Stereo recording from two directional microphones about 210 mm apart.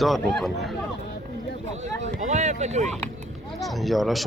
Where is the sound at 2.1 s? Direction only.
35° right (ahead or behind).